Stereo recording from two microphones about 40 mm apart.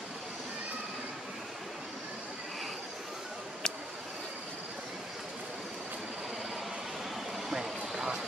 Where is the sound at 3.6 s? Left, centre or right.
Centre.